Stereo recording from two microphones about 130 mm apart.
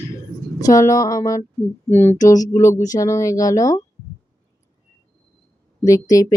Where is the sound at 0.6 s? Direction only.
25° left (ahead or behind).